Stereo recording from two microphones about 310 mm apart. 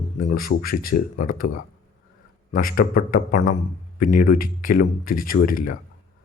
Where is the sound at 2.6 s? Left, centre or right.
Left.